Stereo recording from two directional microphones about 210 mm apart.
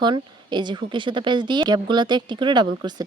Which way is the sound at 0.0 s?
20° right (ahead or behind).